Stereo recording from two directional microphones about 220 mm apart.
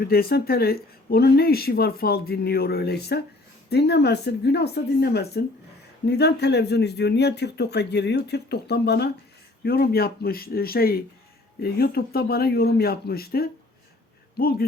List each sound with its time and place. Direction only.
0.0 s speech: 45° left (ahead or behind)